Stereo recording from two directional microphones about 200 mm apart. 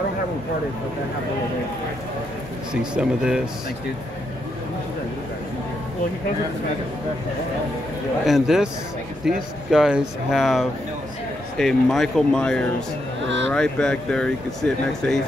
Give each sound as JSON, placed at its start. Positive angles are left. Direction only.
{"t": 2.7, "sound": "speech", "side_deg": -5}
{"t": 8.3, "sound": "speech", "side_deg": 0}